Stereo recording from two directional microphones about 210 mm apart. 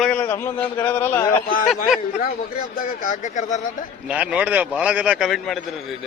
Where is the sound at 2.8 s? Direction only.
40° left (ahead or behind).